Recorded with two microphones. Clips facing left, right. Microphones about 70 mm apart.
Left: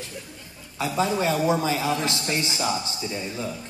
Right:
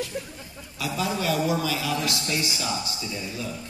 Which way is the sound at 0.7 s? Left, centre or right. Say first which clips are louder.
Left 4 dB; left.